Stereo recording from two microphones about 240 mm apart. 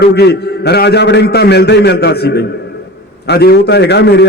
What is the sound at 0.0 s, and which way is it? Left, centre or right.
A man's voice, left.